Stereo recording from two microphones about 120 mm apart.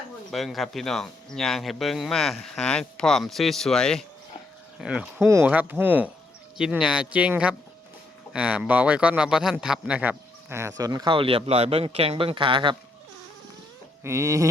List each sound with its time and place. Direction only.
0.3 s speech: centre (ahead or behind)
4.8 s speech: 10° right (ahead or behind)
6.6 s speech: 5° right (ahead or behind); by 11.1 s 30° right (ahead or behind)
11.1 s speech: 45° right (ahead or behind)
14.0 s a sound: 25° right (ahead or behind)